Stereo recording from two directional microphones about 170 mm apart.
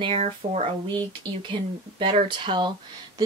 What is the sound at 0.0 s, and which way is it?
Speech, 35° right (ahead or behind).